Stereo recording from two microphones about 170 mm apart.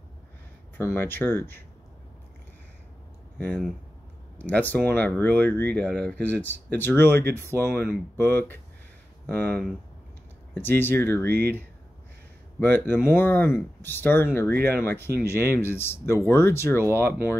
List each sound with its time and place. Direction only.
0.7 s speech: 15° left (ahead or behind)
3.3 s speech: 10° left (ahead or behind)
11.2 s speech: 70° right (ahead or behind)
12.5 s speech: 10° left (ahead or behind)